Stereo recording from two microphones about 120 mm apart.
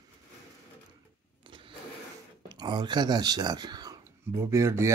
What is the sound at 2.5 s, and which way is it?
Speech, 35° right (ahead or behind).